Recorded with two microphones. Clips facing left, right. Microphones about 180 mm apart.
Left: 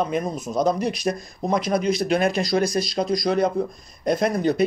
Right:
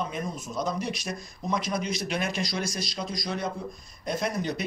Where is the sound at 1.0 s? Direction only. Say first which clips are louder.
Left 9 dB; 55° left (ahead or behind).